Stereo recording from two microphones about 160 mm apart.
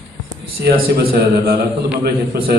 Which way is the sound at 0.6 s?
80° right.